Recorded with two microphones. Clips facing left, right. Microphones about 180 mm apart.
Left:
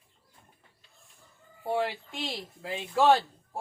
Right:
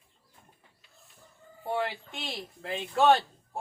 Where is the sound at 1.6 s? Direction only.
5° left (ahead or behind).